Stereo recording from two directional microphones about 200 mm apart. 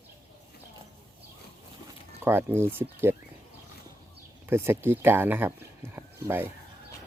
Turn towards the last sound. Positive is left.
turn(degrees=-10)  # may be behind; listen again after turning